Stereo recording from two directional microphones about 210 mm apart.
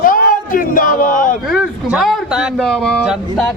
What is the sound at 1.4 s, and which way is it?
A man's voice, 5° right (ahead or behind).